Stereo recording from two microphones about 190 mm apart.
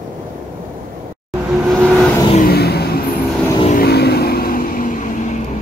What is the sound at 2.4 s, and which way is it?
Vehicle, 55° left (ahead or behind).